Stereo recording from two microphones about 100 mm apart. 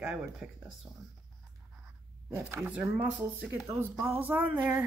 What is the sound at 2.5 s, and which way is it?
Speech, 20° right (ahead or behind).